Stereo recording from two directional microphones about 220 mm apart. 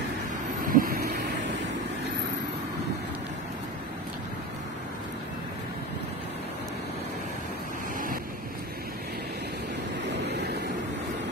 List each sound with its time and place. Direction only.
0.7 s vehicle: 40° right (ahead or behind)
10.2 s vehicle: 50° right (ahead or behind)